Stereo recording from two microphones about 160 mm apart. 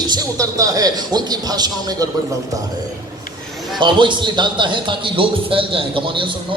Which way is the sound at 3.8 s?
30° right (ahead or behind).